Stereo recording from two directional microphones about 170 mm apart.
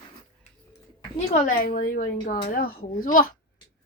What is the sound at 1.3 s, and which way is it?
A woman's voice, 50° left (ahead or behind).